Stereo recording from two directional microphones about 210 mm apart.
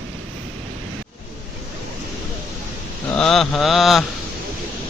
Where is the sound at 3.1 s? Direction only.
5° left (ahead or behind).